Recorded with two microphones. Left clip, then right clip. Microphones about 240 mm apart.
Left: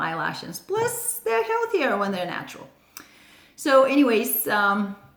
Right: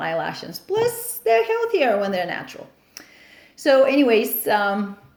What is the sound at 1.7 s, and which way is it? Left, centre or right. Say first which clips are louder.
Speech: right 4 dB; left.